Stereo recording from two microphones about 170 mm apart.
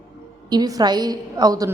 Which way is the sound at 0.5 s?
25° right (ahead or behind).